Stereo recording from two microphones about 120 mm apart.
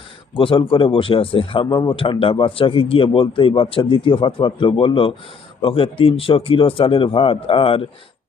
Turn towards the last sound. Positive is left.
turn(degrees=50)  # may be behind; listen again after turning